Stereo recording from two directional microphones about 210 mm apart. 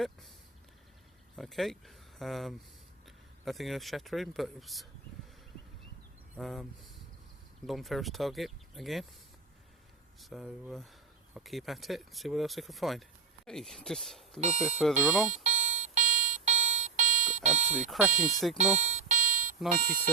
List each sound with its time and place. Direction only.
1.4 s speech: centre (ahead or behind)
6.3 s speech: centre (ahead or behind)
7.7 s speech: centre (ahead or behind)
10.2 s speech: centre (ahead or behind)
14.4 s speech: 35° right (ahead or behind)
14.8 s speech: centre (ahead or behind)
15.3 s alarm clock: 35° right (ahead or behind)
17.8 s speech: 5° right (ahead or behind)
18.8 s a sound: 35° right (ahead or behind)
19.8 s speech: 45° right (ahead or behind)